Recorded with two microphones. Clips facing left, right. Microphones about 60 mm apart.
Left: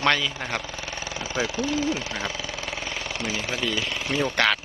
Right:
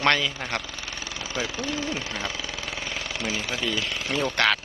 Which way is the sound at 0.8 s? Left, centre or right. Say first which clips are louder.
Left 3 dB; left.